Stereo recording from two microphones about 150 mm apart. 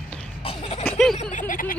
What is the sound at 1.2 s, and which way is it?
Speech, 60° left (ahead or behind).